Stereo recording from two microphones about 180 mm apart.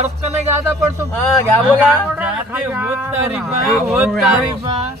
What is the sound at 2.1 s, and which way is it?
Speech, 10° right (ahead or behind).